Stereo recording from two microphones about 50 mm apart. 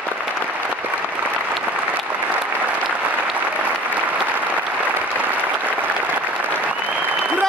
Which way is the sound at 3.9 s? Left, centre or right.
Right.